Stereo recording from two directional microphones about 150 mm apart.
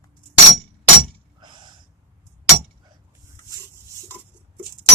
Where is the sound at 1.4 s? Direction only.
30° right (ahead or behind).